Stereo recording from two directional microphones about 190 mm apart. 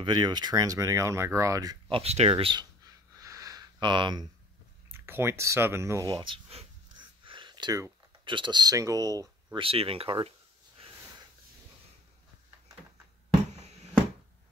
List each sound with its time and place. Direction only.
0.0 s speech: 20° right (ahead or behind)
4.9 s speech: 10° right (ahead or behind); by 10.3 s 30° right (ahead or behind)
13.5 s bouncing: 35° right (ahead or behind)